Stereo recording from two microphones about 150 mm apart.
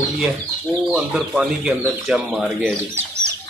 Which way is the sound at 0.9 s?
5° right (ahead or behind).